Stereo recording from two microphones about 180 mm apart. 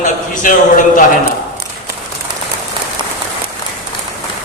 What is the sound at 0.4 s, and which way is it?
Speech, 50° left (ahead or behind).